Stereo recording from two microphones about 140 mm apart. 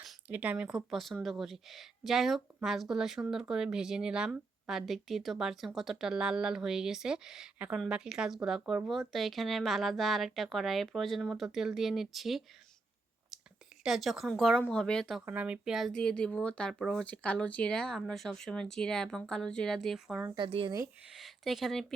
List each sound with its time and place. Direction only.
0.3 s a woman's voice: 10° right (ahead or behind)
13.8 s a woman's voice: centre (ahead or behind)
15.3 s a woman's voice: 10° right (ahead or behind)
20.3 s speech: 35° right (ahead or behind)
21.1 s speech: centre (ahead or behind)